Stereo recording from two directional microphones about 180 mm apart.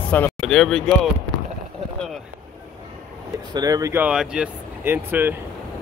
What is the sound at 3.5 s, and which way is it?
Speech, 20° right (ahead or behind).